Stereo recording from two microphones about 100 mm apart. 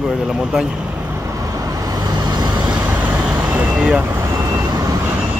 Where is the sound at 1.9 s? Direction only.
45° right (ahead or behind).